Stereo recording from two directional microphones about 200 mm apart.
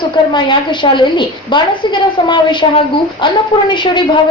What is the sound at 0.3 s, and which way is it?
A woman's voice, 25° left (ahead or behind).